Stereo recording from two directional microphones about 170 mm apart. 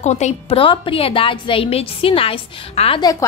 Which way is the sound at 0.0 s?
40° left (ahead or behind).